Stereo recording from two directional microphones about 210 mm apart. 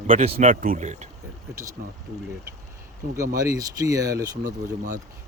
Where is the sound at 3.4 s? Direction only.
15° right (ahead or behind).